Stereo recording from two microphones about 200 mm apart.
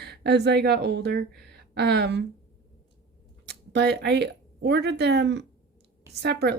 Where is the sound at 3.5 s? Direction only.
55° right (ahead or behind).